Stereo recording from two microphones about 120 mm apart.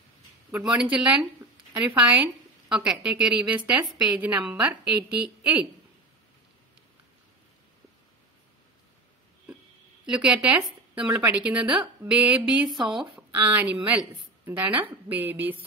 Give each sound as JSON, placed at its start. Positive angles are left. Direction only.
{"t": 0.5, "sound": "a woman's voice", "side_deg": -10}
{"t": 10.0, "sound": "a woman's voice", "side_deg": -10}
{"t": 13.3, "sound": "a woman's voice", "side_deg": -15}